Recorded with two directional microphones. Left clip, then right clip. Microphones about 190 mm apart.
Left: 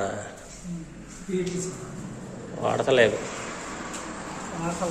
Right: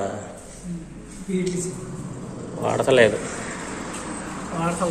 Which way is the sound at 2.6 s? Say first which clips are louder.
Right 3 dB; 5° left (ahead or behind).